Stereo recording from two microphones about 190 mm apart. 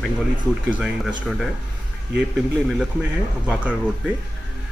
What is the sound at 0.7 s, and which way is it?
A man's voice, 5° right (ahead or behind).